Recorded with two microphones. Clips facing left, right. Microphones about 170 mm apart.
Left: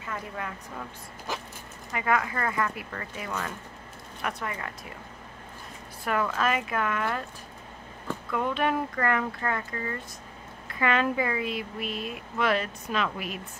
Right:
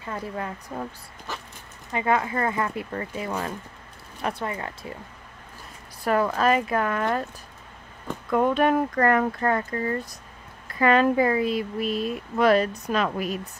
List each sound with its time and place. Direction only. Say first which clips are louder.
0.0 s speech: right 4 dB; 35° right (ahead or behind)
1.9 s speech: right 3 dB; 25° right (ahead or behind)
6.0 s speech: right 6 dB; 35° right (ahead or behind)
8.3 s speech: right 7 dB; 45° right (ahead or behind)